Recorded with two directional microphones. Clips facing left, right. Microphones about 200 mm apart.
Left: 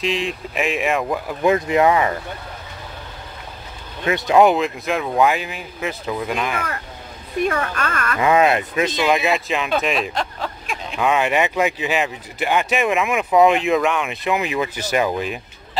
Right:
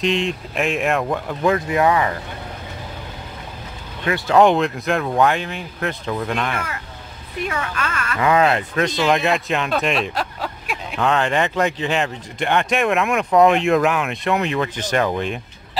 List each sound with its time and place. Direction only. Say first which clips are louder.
0.0 s speech: right 2 dB; centre (ahead or behind)
1.4 s speech: left 2 dB; 20° left (ahead or behind)
4.0 s speech: left 1 dB; 20° left (ahead or behind)
4.4 s speech: even; 5° left (ahead or behind)
7.6 s speech: left 2 dB; 45° left (ahead or behind)
8.2 s speech: left 1 dB; 20° left (ahead or behind)
9.1 s speech: even; 5° left (ahead or behind)
10.4 s a sound: even; 5° right (ahead or behind)
11.0 s speech: left 1 dB; 10° left (ahead or behind)